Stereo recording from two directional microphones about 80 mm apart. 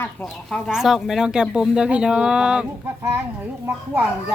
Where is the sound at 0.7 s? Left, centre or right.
Centre.